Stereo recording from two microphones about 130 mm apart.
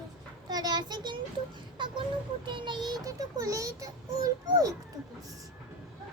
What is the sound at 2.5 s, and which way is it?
A child's voice, 35° right (ahead or behind).